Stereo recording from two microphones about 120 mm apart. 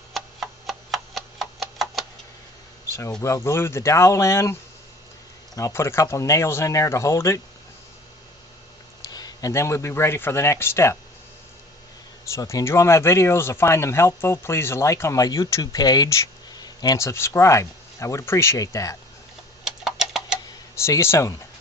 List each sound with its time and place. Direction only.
0.1 s tick-tock: centre (ahead or behind)
3.2 s speech: 25° left (ahead or behind)
5.5 s speech: 25° left (ahead or behind)
9.0 s speech: 35° left (ahead or behind)
12.3 s speech: 30° left (ahead or behind)
19.6 s tick-tock: 5° right (ahead or behind)
20.7 s speech: 25° left (ahead or behind)